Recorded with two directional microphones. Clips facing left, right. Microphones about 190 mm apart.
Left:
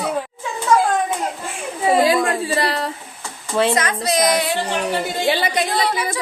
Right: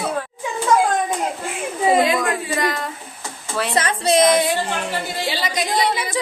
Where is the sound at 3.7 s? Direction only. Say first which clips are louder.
Right 2 dB; 30° right (ahead or behind).